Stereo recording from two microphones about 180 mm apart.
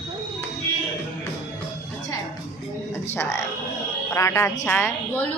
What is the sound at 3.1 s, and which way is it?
A woman's voice, 15° left (ahead or behind).